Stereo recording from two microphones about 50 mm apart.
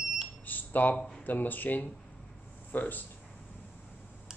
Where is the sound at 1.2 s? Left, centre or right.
Left.